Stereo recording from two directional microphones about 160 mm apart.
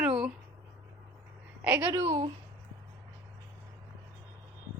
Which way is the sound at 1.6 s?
15° right (ahead or behind).